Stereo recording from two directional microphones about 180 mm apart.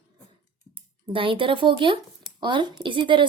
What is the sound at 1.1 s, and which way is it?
Speech, 30° right (ahead or behind).